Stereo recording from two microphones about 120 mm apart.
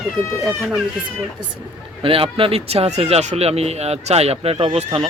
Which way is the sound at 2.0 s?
50° right (ahead or behind).